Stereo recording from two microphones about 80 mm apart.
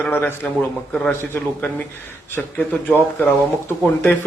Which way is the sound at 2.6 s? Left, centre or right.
Left.